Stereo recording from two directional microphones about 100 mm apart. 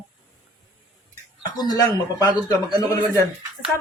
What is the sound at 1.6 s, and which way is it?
Speech, 40° left (ahead or behind).